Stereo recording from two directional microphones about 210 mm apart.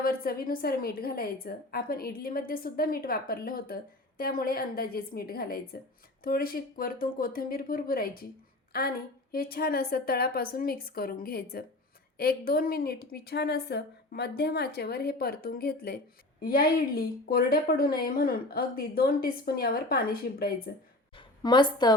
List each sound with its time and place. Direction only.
0.0 s a woman's voice: 45° left (ahead or behind)
21.2 s a woman's voice: 20° left (ahead or behind)